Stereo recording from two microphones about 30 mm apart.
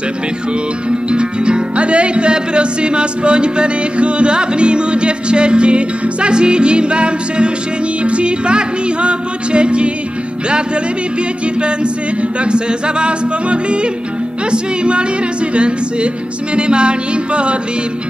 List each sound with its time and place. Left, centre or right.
0.8 s music: right
11.6 s music: right